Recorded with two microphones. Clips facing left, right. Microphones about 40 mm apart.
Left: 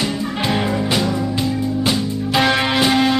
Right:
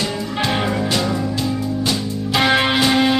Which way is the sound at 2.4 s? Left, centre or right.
Centre.